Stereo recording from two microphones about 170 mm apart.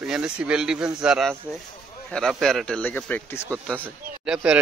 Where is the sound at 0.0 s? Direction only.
5° right (ahead or behind); by 3.4 s 10° left (ahead or behind).